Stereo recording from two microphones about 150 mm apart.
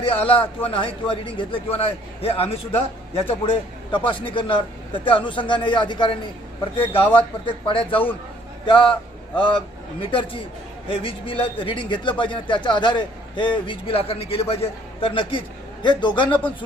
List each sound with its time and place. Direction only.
0.0 s a man's voice: 40° left (ahead or behind)